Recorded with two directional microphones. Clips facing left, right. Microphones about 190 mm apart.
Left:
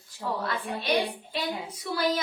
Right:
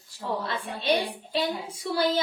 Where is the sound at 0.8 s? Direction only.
30° right (ahead or behind).